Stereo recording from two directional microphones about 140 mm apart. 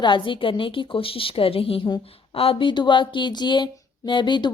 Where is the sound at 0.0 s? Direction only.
35° left (ahead or behind).